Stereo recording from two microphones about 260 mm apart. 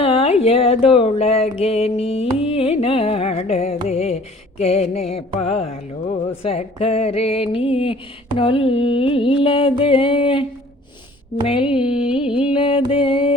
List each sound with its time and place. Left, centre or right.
0.0 s mantra: left
11.4 s mantra: centre
11.9 s music: centre
12.3 s mantra: centre